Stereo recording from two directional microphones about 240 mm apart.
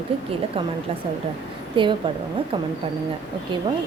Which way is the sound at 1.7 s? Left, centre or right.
Centre.